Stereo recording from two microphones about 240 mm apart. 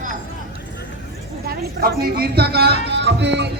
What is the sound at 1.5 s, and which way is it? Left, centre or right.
Speech, right.